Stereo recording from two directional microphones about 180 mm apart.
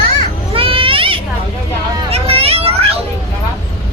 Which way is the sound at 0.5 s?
30° right (ahead or behind).